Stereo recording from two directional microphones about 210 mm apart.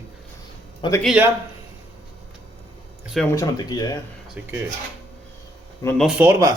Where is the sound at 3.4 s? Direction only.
20° left (ahead or behind).